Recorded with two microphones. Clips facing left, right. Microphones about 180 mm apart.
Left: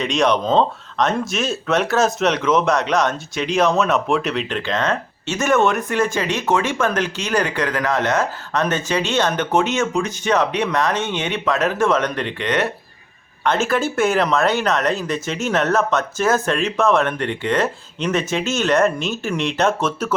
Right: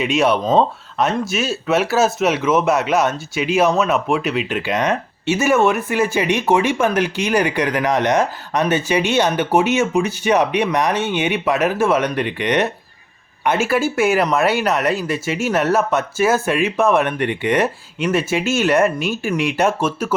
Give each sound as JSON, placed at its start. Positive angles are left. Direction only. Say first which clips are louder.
{"t": 0.0, "sound": "speech", "louder": "right 1 dB", "side_deg": -5}